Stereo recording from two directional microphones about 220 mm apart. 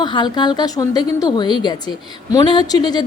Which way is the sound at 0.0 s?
20° left (ahead or behind).